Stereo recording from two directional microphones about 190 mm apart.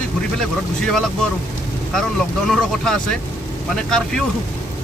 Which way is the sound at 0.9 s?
Centre (ahead or behind).